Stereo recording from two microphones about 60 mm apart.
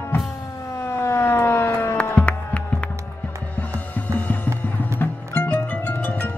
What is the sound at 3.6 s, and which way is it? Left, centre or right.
Music, left.